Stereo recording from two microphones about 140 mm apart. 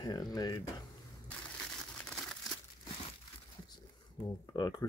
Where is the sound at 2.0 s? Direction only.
5° left (ahead or behind).